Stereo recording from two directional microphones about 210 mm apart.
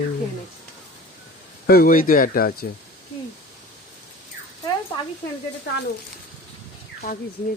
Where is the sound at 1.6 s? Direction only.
45° left (ahead or behind).